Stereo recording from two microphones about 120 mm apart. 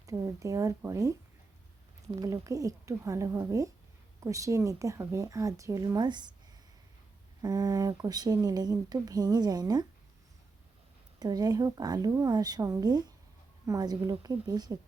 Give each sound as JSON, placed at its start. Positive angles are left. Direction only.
{"t": 0.0, "sound": "speech", "side_deg": -30}
{"t": 2.2, "sound": "speech", "side_deg": -25}
{"t": 7.4, "sound": "speech", "side_deg": -30}
{"t": 11.2, "sound": "speech", "side_deg": -35}